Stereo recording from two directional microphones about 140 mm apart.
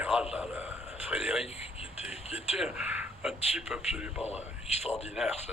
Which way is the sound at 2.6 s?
5° right (ahead or behind).